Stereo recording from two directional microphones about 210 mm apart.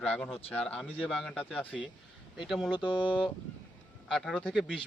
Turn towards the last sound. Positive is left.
turn(degrees=5)  # may be behind; listen again after turning